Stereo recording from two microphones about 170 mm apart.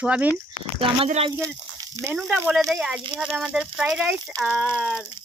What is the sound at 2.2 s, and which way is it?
Speech, centre (ahead or behind).